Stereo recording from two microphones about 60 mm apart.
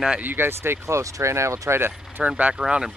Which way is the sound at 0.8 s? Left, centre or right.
Right.